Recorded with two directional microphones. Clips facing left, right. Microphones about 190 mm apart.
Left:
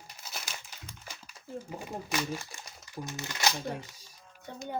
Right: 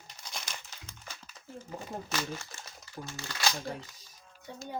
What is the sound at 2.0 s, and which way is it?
Speech, 15° left (ahead or behind).